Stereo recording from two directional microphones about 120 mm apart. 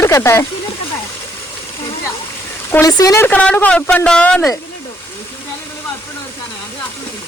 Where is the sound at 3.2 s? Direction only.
10° left (ahead or behind).